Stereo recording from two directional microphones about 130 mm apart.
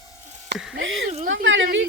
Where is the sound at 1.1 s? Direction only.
60° right (ahead or behind).